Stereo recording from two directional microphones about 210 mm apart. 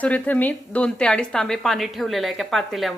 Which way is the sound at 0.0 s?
5° left (ahead or behind).